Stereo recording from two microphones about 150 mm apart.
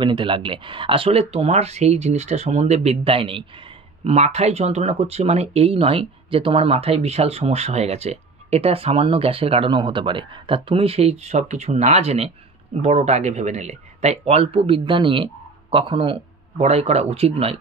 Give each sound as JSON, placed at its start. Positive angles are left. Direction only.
{"t": 0.0, "sound": "speech", "side_deg": -30}